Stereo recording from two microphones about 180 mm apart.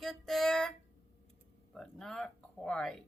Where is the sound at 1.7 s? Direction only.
5° left (ahead or behind).